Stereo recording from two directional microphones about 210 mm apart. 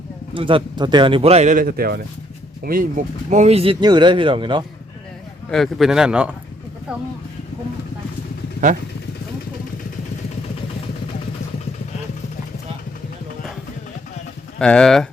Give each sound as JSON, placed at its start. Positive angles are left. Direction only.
{"t": 0.3, "sound": "speech", "side_deg": -25}
{"t": 3.2, "sound": "speech", "side_deg": -35}
{"t": 5.5, "sound": "speech", "side_deg": 0}
{"t": 14.6, "sound": "speech", "side_deg": 5}